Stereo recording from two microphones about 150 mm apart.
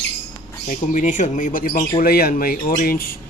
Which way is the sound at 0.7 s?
55° left (ahead or behind).